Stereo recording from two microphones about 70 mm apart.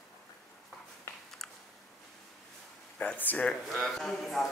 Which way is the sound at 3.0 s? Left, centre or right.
Left.